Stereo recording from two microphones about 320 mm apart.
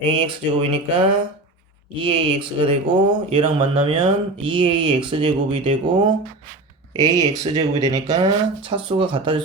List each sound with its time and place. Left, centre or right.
0.1 s speech: centre